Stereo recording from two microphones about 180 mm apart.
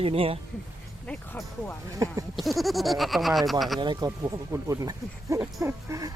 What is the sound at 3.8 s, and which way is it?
Speech, 25° right (ahead or behind).